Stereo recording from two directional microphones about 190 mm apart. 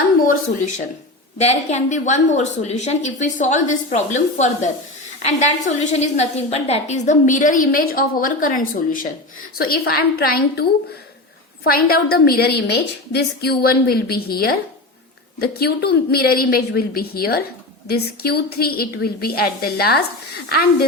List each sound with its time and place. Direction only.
1.4 s a woman's voice: 35° left (ahead or behind); by 20.8 s 55° left (ahead or behind)